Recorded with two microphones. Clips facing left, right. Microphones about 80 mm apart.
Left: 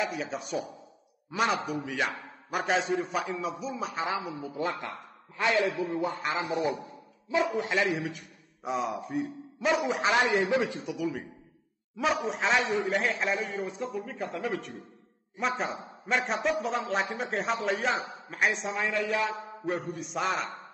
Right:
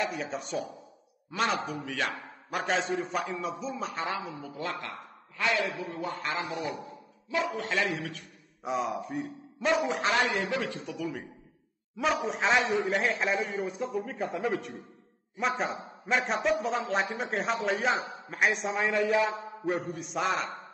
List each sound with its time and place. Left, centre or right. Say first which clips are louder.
0.0 s a man's voice: even; centre
1.3 s a man's voice: left 2 dB; centre
1.9 s a man's voice: left 1 dB; centre
8.6 s a man's voice: even; centre
10.1 s a man's voice: left 3 dB; left
11.0 s a man's voice: left 3 dB; centre
18.9 s speech: right 4 dB; centre
19.6 s a man's voice: right 1 dB; centre